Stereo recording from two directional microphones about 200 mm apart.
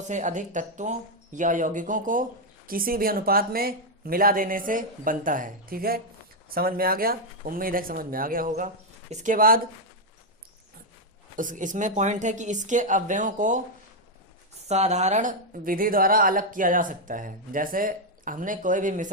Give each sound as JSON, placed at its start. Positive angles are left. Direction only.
{"t": 0.1, "sound": "speech", "side_deg": -40}
{"t": 11.3, "sound": "speech", "side_deg": -40}
{"t": 14.7, "sound": "speech", "side_deg": -35}